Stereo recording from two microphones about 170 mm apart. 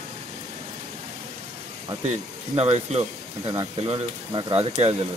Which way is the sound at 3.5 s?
25° right (ahead or behind).